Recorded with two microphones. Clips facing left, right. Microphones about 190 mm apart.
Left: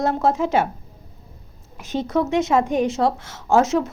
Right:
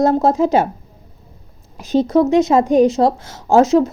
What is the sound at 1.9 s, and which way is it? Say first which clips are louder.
A woman's voice: right 8 dB; 35° right (ahead or behind).